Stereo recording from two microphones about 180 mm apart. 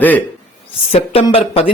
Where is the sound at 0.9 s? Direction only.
30° left (ahead or behind).